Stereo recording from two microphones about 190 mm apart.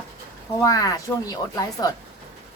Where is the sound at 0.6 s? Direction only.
20° left (ahead or behind).